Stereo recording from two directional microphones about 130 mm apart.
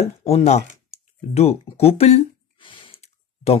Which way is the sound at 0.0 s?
55° left (ahead or behind).